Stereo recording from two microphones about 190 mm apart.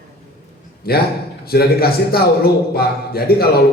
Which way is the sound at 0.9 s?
55° left (ahead or behind).